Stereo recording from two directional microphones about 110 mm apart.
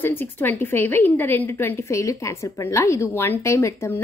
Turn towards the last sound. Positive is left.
turn(degrees=25)  # may be behind; listen again after turning